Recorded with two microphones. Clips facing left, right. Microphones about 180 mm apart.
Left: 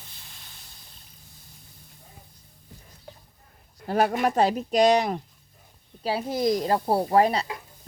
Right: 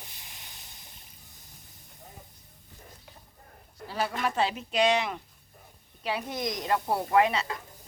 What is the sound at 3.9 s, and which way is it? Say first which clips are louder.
Speech: left 9 dB; 50° left (ahead or behind).